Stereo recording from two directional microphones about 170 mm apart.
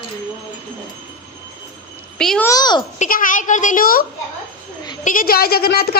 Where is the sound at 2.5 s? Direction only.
25° left (ahead or behind).